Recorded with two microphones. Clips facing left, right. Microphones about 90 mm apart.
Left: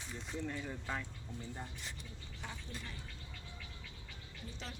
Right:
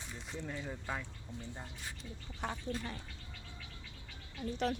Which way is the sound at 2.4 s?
60° right (ahead or behind).